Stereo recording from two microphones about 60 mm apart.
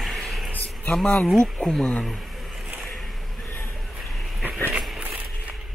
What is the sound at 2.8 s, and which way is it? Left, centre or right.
Boat, centre.